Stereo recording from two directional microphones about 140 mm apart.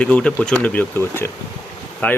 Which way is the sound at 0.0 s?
10° left (ahead or behind).